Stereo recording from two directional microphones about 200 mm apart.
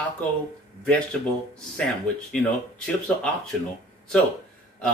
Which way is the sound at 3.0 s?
5° left (ahead or behind).